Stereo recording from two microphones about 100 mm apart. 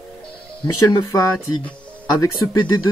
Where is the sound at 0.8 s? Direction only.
35° left (ahead or behind).